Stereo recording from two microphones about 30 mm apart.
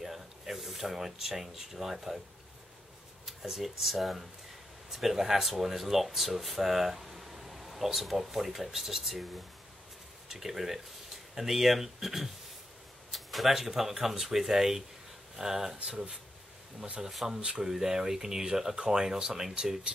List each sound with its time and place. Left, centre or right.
0.0 s speech: centre
3.4 s speech: centre
17.2 s speech: right